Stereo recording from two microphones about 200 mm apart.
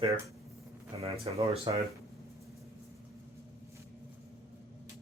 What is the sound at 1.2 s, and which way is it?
Speech, 30° right (ahead or behind).